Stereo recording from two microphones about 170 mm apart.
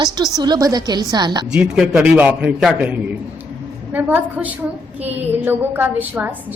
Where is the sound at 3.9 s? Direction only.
10° right (ahead or behind).